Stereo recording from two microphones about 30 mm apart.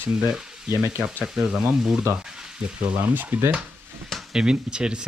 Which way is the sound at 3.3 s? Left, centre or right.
Right.